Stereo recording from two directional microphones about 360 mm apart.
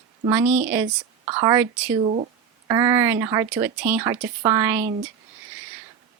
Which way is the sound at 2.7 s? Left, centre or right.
Centre.